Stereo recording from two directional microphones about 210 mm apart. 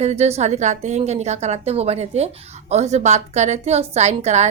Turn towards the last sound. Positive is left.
turn(degrees=-30)  # may be behind; listen again after turning